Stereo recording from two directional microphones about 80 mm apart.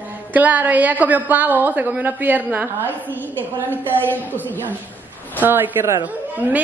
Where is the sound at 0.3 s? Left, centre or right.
Centre.